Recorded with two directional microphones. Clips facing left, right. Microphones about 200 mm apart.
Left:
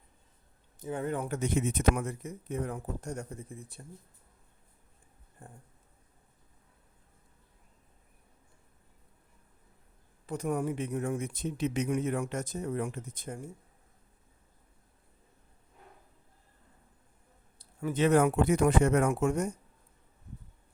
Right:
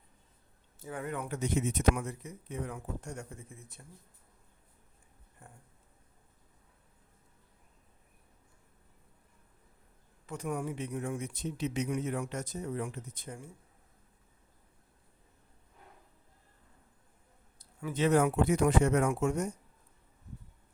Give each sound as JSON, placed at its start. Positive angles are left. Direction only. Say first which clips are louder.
{"t": 0.8, "sound": "speech", "louder": "left 5 dB", "side_deg": 25}
{"t": 1.3, "sound": "speech", "louder": "left 2 dB", "side_deg": 55}
{"t": 10.2, "sound": "speech", "louder": "left 4 dB", "side_deg": 40}
{"t": 17.6, "sound": "a sound", "louder": "left 5 dB", "side_deg": 40}
{"t": 17.9, "sound": "speech", "louder": "left 2 dB", "side_deg": 55}